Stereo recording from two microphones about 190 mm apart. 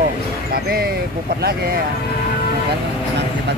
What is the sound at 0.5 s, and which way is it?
Speech, 55° right (ahead or behind).